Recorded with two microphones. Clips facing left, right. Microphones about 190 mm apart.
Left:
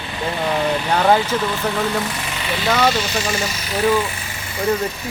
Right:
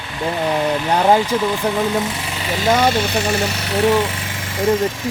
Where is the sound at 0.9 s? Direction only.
15° right (ahead or behind).